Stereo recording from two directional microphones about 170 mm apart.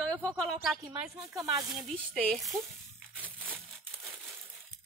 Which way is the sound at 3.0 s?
10° right (ahead or behind).